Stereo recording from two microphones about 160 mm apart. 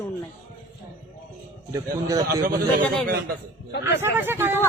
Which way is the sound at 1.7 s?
20° right (ahead or behind).